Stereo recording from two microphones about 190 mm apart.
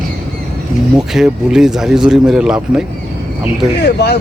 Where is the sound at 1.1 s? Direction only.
5° right (ahead or behind).